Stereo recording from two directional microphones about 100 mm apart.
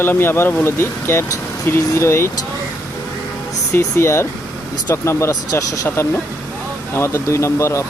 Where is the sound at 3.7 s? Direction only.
25° left (ahead or behind).